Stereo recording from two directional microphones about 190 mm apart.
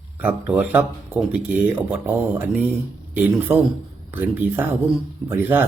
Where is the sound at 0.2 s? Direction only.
10° right (ahead or behind).